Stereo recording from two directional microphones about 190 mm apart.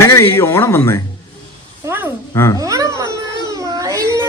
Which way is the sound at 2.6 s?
15° right (ahead or behind).